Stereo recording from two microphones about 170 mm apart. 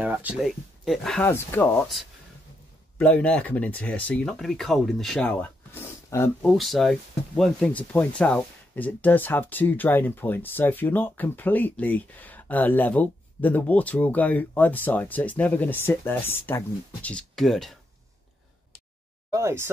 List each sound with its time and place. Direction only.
0.0 s speech: 10° right (ahead or behind)
1.2 s speech: 15° left (ahead or behind)
3.0 s speech: 5° left (ahead or behind)
6.4 s speech: centre (ahead or behind)
19.3 s speech: 15° right (ahead or behind)